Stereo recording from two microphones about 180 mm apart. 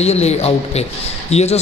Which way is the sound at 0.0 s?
35° left (ahead or behind).